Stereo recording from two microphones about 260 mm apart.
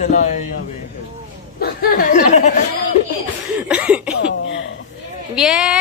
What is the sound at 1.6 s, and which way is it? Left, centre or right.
Speech, left.